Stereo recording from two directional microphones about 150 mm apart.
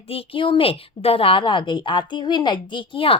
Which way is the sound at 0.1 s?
40° left (ahead or behind).